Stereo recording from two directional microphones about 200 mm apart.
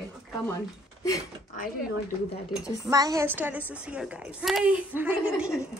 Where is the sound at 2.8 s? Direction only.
20° right (ahead or behind).